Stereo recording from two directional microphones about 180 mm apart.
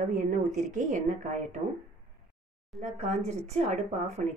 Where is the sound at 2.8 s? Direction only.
40° right (ahead or behind).